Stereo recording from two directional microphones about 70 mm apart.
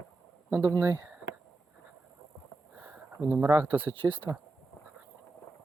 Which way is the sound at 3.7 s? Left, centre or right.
Right.